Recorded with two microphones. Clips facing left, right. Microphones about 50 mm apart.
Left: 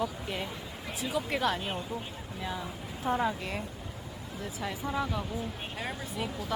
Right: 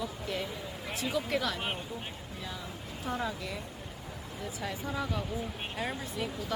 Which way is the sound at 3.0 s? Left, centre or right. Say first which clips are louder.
Left 5 dB; left.